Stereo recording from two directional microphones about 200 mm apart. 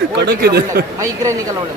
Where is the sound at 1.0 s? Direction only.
15° right (ahead or behind).